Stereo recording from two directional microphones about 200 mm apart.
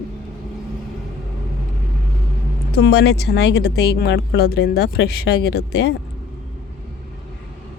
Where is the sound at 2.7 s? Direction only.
55° left (ahead or behind).